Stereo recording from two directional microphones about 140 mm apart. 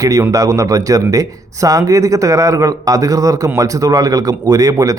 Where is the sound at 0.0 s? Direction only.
25° right (ahead or behind).